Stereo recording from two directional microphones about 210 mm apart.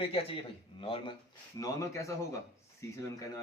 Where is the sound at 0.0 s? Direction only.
25° left (ahead or behind).